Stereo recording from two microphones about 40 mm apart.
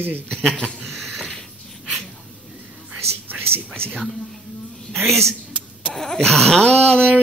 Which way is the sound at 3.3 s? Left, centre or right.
Right.